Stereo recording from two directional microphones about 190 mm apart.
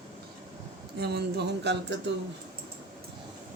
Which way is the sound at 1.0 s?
60° right (ahead or behind).